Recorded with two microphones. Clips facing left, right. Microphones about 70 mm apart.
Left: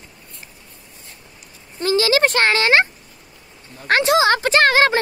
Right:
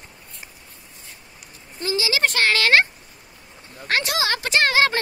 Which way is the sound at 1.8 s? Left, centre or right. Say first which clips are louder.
Left 6 dB; left.